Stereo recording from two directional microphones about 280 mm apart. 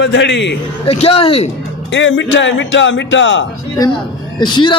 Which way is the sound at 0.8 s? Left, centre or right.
Left.